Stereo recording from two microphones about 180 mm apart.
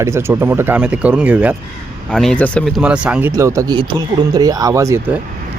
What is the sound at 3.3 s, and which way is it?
Speech, 20° right (ahead or behind).